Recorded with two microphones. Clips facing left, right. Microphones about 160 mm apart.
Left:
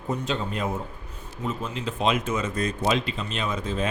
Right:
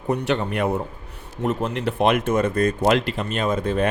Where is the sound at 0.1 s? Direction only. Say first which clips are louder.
Right 6 dB; 70° right (ahead or behind).